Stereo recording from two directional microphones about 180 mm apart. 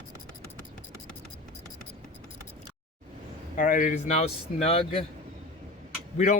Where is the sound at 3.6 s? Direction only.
50° left (ahead or behind).